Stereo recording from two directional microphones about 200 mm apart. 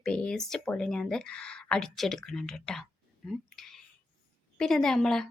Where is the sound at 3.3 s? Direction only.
Centre (ahead or behind).